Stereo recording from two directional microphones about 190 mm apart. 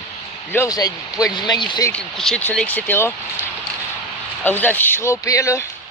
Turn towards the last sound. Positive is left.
turn(degrees=15)  # may be behind; listen again after turning